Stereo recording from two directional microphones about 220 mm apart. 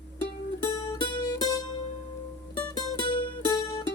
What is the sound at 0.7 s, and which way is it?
Music, 15° left (ahead or behind).